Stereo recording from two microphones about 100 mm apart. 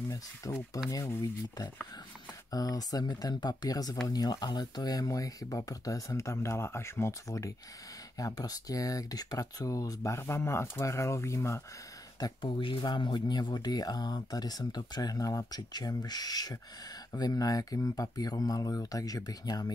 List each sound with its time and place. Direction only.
0.1 s speech: 35° left (ahead or behind)
12.2 s speech: 55° left (ahead or behind); by 19.7 s 40° left (ahead or behind)